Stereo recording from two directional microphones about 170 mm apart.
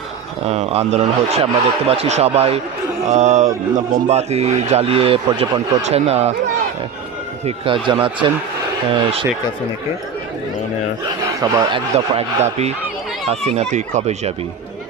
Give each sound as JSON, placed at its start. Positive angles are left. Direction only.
{"t": 0.4, "sound": "a man's voice", "side_deg": -40}
{"t": 7.4, "sound": "a man's voice", "side_deg": -30}
{"t": 11.3, "sound": "speech", "side_deg": -20}
{"t": 11.9, "sound": "a man's voice", "side_deg": -40}